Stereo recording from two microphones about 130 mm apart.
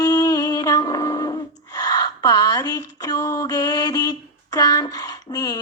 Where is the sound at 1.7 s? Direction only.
30° left (ahead or behind).